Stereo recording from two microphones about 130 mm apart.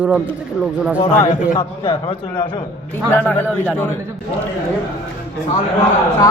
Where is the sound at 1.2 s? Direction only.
80° left.